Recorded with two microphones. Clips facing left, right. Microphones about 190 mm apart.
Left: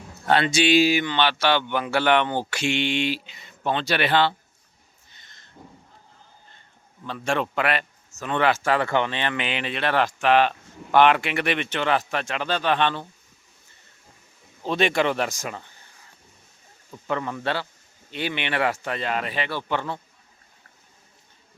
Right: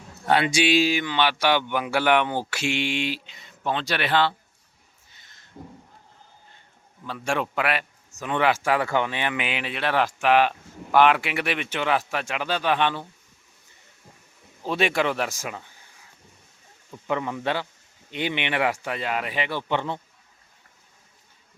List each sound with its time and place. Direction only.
0.3 s a man's voice: 10° right (ahead or behind)
0.8 s speech: 5° left (ahead or behind)
1.1 s a man's voice: 10° right (ahead or behind)
5.1 s a sound: 5° right (ahead or behind)
7.0 s a man's voice: 10° right (ahead or behind)
14.6 s speech: 5° right (ahead or behind)
16.9 s a man's voice: 15° right (ahead or behind)